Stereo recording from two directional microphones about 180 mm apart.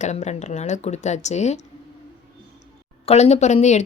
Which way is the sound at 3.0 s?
35° left (ahead or behind).